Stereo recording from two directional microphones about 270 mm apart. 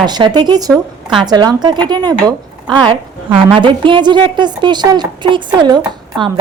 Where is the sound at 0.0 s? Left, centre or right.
Centre.